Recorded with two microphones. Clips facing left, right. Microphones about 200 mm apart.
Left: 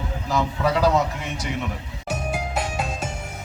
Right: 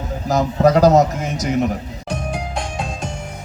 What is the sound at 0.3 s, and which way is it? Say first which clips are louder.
A man's voice: right 8 dB; 40° right (ahead or behind).